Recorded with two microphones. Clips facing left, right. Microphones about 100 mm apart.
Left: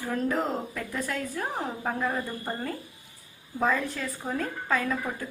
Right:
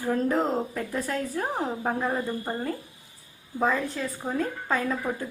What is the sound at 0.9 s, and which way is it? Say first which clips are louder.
Speech: right 2 dB; 35° right (ahead or behind).